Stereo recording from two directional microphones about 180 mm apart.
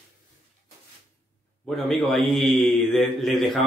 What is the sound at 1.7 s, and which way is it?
Speech, centre (ahead or behind).